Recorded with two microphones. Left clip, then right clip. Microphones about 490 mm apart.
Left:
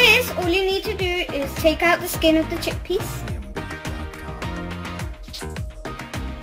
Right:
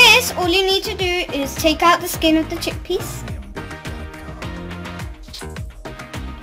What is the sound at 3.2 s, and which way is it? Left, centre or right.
Music, centre.